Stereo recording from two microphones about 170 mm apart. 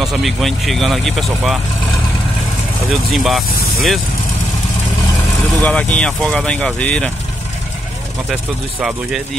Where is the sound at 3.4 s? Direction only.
60° left (ahead or behind).